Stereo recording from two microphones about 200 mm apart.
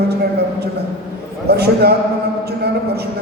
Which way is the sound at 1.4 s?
55° right (ahead or behind).